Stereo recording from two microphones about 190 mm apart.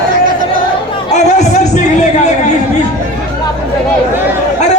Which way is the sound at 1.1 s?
40° left (ahead or behind).